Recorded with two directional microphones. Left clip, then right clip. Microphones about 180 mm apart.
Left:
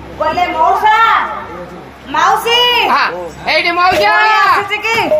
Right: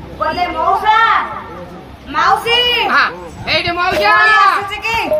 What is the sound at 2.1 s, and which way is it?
A woman's voice, 15° right (ahead or behind).